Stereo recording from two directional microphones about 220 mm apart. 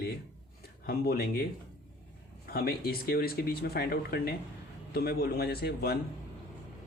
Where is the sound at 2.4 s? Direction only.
45° left (ahead or behind).